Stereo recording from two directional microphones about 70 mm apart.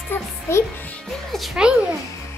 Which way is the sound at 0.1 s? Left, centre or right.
Left.